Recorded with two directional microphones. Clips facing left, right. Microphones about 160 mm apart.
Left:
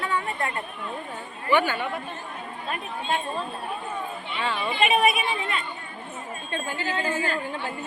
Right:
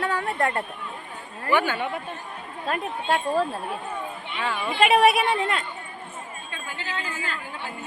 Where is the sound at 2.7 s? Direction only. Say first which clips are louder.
Right 4 dB; 80° right.